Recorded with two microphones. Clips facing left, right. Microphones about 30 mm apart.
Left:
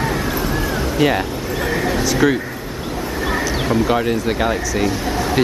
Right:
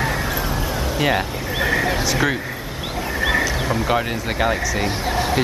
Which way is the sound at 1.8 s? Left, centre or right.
Centre.